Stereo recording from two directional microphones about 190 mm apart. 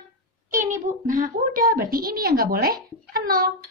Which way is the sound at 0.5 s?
45° right (ahead or behind).